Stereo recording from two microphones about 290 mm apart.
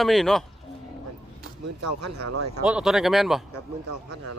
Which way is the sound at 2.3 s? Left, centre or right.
Right.